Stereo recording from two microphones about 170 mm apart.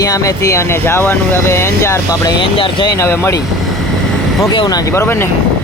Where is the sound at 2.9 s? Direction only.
15° left (ahead or behind).